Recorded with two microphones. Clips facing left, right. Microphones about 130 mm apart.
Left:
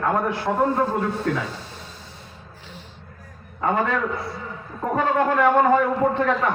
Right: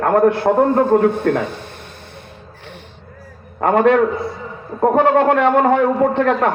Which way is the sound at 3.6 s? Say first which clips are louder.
Right 9 dB; 65° right (ahead or behind).